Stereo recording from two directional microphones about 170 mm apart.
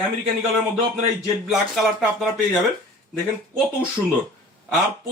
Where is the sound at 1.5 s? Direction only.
Centre (ahead or behind).